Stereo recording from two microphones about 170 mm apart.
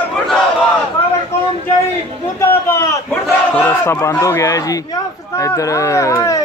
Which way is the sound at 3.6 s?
15° left (ahead or behind).